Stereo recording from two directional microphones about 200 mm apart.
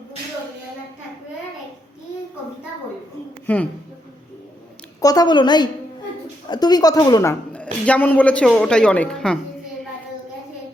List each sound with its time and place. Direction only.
3.4 s a woman's voice: 5° left (ahead or behind)
4.9 s a woman's voice: 20° left (ahead or behind)